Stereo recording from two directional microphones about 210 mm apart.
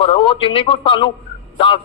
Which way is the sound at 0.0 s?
25° left (ahead or behind).